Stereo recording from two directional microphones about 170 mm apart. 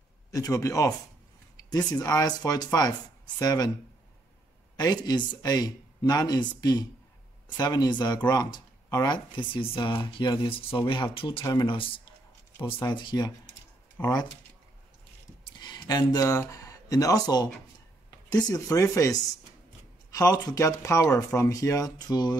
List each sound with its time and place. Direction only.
0.3 s speech: 20° left (ahead or behind)
4.7 s speech: 25° left (ahead or behind)
14.0 s speech: 15° left (ahead or behind)
15.4 s speech: 25° left (ahead or behind)